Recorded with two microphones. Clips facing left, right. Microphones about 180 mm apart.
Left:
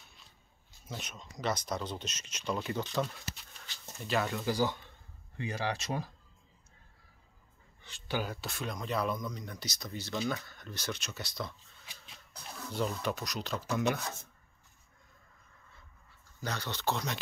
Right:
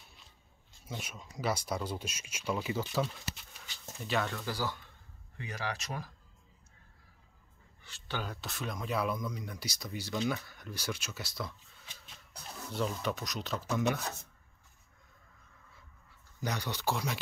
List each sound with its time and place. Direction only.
0.8 s speech: 5° right (ahead or behind)
4.3 s speech: 15° left (ahead or behind)
5.4 s speech: 30° left (ahead or behind)
7.8 s speech: 15° left (ahead or behind); by 11.5 s 5° right (ahead or behind)
11.8 s shuffle: 10° left (ahead or behind)
12.7 s speech: centre (ahead or behind)
16.3 s speech: 15° right (ahead or behind)